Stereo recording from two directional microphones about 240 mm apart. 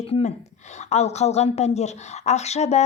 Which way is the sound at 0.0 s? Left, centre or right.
Left.